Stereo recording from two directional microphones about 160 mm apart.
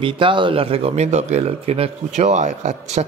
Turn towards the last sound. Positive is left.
turn(degrees=-45)  # may be behind; listen again after turning